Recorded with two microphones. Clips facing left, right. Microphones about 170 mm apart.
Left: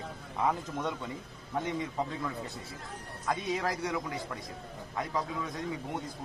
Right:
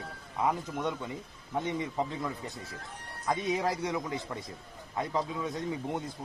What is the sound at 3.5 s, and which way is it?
Speech, 20° right (ahead or behind).